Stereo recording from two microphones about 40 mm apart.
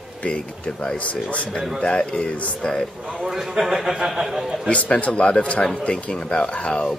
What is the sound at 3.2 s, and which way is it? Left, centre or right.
A man's voice, centre.